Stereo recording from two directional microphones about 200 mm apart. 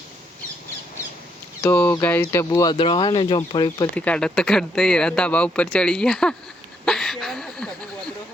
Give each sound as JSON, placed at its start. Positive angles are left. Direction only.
{"t": 1.6, "sound": "speech", "side_deg": 10}
{"t": 3.9, "sound": "speech", "side_deg": 5}
{"t": 6.8, "sound": "a sound", "side_deg": 0}